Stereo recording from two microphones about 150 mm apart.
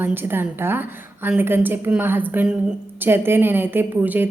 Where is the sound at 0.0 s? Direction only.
15° right (ahead or behind).